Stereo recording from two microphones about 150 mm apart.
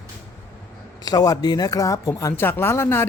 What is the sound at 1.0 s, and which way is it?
Speech, 25° left (ahead or behind).